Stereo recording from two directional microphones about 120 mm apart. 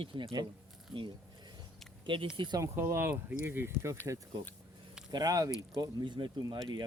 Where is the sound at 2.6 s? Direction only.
20° right (ahead or behind).